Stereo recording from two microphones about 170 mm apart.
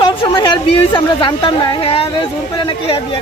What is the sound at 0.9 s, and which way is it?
A woman's voice, 30° left (ahead or behind).